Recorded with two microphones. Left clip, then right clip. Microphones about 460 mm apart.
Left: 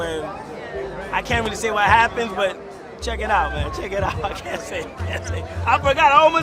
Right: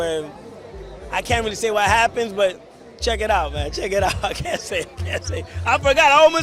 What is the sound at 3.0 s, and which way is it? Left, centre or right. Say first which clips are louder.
A man's voice: right 1 dB; right.